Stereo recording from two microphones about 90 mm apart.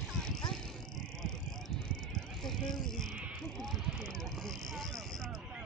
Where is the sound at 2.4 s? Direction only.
5° left (ahead or behind).